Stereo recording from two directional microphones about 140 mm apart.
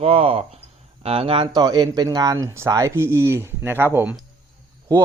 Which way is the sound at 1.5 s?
30° right (ahead or behind).